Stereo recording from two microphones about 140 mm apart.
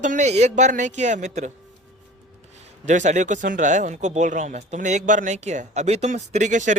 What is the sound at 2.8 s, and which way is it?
Speech, 60° right (ahead or behind).